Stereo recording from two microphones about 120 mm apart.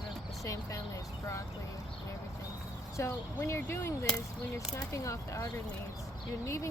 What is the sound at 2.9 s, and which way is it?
Speech, 25° left (ahead or behind).